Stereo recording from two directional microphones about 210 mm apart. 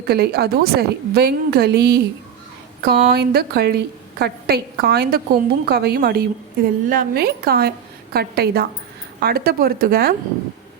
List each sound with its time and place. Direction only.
0.1 s a woman's voice: 50° right (ahead or behind)